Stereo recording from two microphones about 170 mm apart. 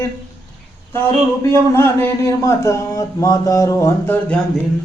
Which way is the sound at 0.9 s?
15° left (ahead or behind).